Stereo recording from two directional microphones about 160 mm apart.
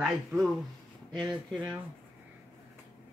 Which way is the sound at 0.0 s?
5° right (ahead or behind).